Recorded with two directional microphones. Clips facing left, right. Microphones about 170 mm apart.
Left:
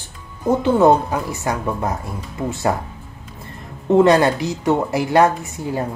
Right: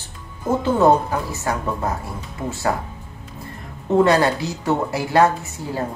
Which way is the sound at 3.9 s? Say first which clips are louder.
Left 3 dB; 20° left (ahead or behind).